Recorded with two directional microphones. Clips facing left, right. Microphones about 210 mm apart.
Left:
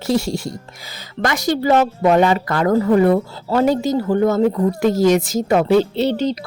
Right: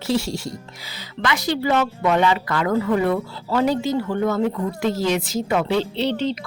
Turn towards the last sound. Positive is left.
turn(degrees=40)  # may be behind; listen again after turning